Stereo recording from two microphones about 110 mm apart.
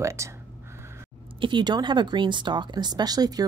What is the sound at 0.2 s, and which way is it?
Speech, 25° right (ahead or behind).